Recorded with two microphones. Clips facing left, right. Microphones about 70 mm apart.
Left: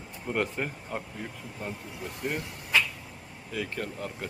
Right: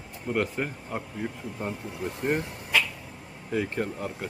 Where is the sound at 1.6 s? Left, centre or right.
Right.